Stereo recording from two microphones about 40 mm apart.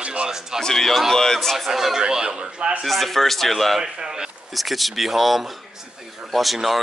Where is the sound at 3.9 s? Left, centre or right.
Centre.